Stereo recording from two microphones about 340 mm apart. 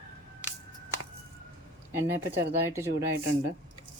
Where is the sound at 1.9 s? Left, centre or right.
Centre.